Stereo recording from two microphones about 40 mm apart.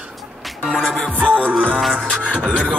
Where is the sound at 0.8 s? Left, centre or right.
Centre.